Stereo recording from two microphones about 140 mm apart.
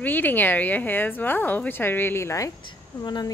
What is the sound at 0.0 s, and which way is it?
A woman's voice, 15° left (ahead or behind).